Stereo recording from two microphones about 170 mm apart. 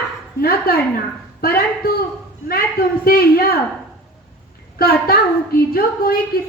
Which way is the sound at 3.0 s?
60° left (ahead or behind).